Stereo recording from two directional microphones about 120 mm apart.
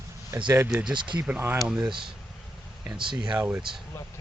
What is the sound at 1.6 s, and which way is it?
Speech, 5° right (ahead or behind).